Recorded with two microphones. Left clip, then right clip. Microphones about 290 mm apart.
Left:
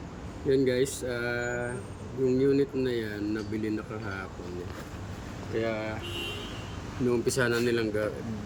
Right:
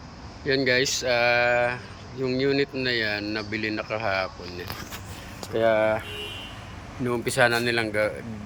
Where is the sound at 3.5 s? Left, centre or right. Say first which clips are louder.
Right 4 dB; right.